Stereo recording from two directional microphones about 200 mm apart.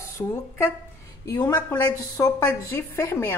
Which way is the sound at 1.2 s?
20° left (ahead or behind).